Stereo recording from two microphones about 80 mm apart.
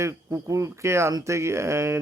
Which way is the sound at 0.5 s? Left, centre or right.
Right.